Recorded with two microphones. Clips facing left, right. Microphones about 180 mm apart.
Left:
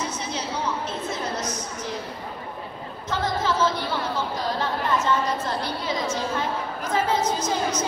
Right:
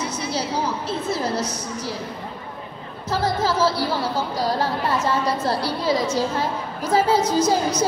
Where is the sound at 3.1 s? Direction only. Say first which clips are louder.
Right 3 dB; 35° right (ahead or behind).